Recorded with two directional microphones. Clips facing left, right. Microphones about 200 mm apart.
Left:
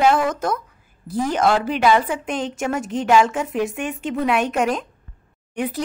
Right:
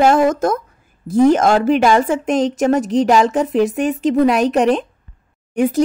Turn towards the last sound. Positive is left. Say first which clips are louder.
# right 9 dB
turn(degrees=-45)  # may be behind; listen again after turning